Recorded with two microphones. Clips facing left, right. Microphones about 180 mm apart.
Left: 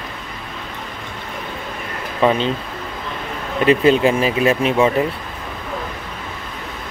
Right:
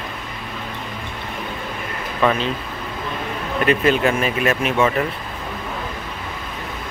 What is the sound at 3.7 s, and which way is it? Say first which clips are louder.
Speech: left 4 dB; 30° left (ahead or behind).